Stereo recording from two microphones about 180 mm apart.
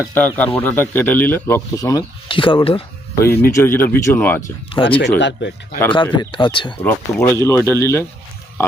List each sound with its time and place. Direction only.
0.0 s speech: 10° left (ahead or behind); by 2.8 s 30° left (ahead or behind)
3.2 s speech: 15° left (ahead or behind)
4.7 s speech: 30° left (ahead or behind)
5.2 s speech: 75° left (ahead or behind)
5.9 s speech: 25° left (ahead or behind)
6.8 s speech: 15° left (ahead or behind)